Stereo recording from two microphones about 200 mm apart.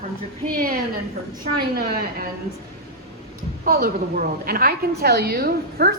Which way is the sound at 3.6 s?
45° right (ahead or behind).